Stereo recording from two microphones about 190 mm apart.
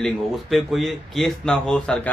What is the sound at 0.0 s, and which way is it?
Speech, centre (ahead or behind).